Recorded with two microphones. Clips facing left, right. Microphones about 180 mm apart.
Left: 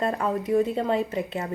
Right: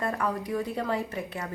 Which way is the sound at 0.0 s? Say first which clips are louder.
Left 4 dB; 25° left (ahead or behind).